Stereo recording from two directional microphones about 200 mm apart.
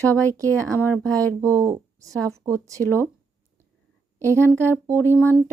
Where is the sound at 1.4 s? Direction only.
15° right (ahead or behind).